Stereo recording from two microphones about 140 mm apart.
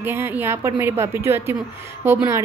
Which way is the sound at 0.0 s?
15° right (ahead or behind).